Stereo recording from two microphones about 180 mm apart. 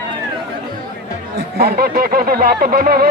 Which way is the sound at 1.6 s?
60° right (ahead or behind).